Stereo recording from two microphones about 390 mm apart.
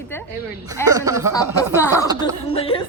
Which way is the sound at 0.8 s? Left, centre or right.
Centre.